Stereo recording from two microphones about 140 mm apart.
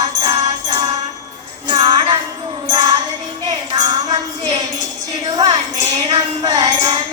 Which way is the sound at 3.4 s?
30° right (ahead or behind).